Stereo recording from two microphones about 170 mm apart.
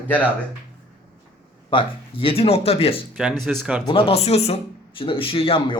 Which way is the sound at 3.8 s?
30° left (ahead or behind).